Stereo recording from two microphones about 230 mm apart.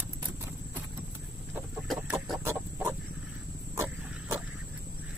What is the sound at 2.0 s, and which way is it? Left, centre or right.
Chicken, centre.